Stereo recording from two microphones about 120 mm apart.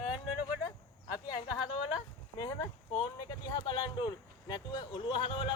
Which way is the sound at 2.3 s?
35° left (ahead or behind).